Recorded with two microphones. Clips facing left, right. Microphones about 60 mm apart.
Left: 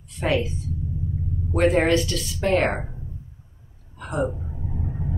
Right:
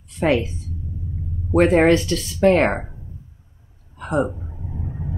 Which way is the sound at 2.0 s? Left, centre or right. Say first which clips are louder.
Right 7 dB; right.